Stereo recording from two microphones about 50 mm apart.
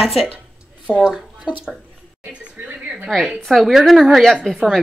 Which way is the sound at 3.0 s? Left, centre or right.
Centre.